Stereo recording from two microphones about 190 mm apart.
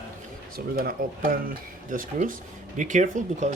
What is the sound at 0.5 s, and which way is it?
Speech, 50° right (ahead or behind).